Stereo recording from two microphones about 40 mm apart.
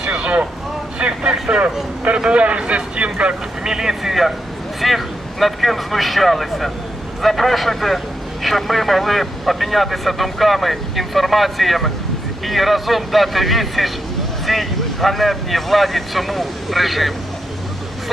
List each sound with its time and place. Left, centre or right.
0.0 s vehicle: right
2.0 s speech: right
3.6 s a man's voice: centre